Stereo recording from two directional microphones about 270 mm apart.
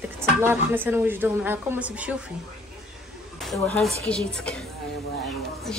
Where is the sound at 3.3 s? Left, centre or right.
Centre.